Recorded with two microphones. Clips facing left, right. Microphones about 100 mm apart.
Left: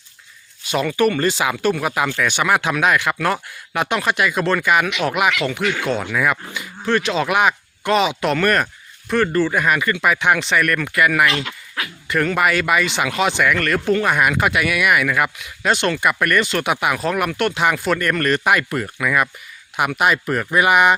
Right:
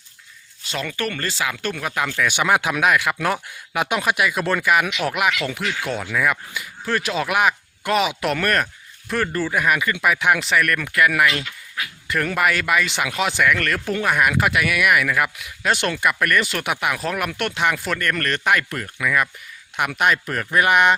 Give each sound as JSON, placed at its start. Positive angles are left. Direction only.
{"t": 0.7, "sound": "speech", "side_deg": 15}
{"t": 2.2, "sound": "speech", "side_deg": -15}
{"t": 5.6, "sound": "speech", "side_deg": 60}
{"t": 5.9, "sound": "speech", "side_deg": -5}
{"t": 11.4, "sound": "dog", "side_deg": 90}
{"t": 12.0, "sound": "speech", "side_deg": 0}